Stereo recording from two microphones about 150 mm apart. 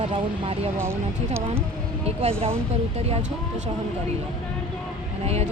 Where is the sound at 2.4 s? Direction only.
40° right (ahead or behind).